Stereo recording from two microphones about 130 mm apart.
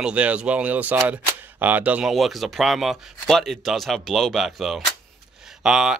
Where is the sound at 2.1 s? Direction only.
Centre (ahead or behind).